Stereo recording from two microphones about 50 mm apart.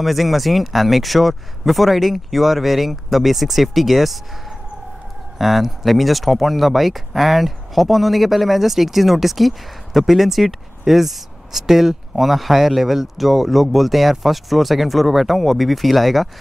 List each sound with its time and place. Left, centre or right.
0.0 s speech: centre
5.4 s speech: centre